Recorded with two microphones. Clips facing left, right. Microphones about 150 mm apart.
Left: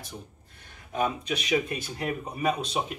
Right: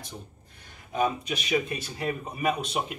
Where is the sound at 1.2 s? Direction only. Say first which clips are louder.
Left 1 dB; centre (ahead or behind).